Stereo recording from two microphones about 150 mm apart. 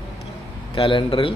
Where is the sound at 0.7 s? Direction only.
35° left (ahead or behind).